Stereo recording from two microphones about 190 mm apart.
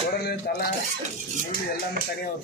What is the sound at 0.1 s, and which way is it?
Cutlery, 55° left (ahead or behind).